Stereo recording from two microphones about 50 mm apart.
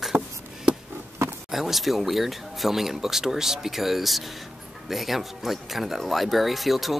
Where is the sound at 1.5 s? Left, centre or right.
Centre.